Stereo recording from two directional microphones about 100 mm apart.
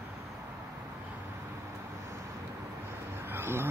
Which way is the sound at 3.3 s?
25° right (ahead or behind).